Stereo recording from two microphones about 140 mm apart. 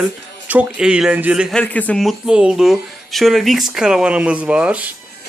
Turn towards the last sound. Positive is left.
turn(degrees=-10)  # may be behind; listen again after turning